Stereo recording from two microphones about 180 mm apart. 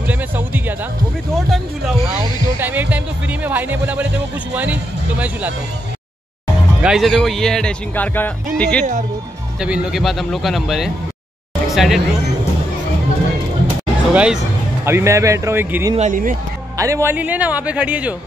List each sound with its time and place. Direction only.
0.0 s music: 10° right (ahead or behind)
4.6 s speech: 10° right (ahead or behind)
6.8 s a man's voice: 5° right (ahead or behind)
9.6 s a man's voice: 5° right (ahead or behind)
14.1 s a man's voice: 5° right (ahead or behind)
14.9 s speech: 15° right (ahead or behind)
16.0 s speech: 45° right (ahead or behind)
16.7 s speech: 15° right (ahead or behind)